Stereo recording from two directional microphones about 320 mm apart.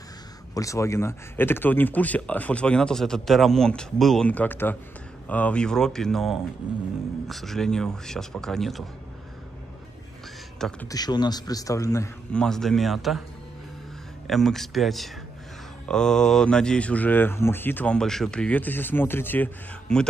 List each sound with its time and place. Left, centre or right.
0.6 s speech: centre
10.6 s a man's voice: centre
14.2 s speech: centre